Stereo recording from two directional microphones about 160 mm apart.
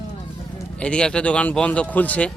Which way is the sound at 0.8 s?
5° left (ahead or behind).